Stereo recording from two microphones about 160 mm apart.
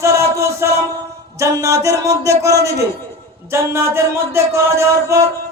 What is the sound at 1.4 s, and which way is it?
A man's voice, 20° right (ahead or behind).